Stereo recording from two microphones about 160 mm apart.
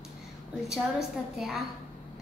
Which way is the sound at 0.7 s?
Centre (ahead or behind).